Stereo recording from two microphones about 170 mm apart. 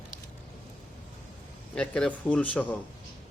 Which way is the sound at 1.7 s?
5° left (ahead or behind).